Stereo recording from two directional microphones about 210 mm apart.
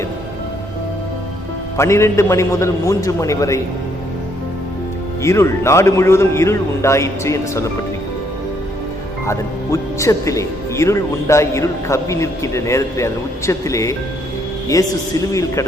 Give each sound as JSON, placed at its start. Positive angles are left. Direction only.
{"t": 1.7, "sound": "speech", "side_deg": 15}
{"t": 5.2, "sound": "speech", "side_deg": 15}
{"t": 9.2, "sound": "speech", "side_deg": 15}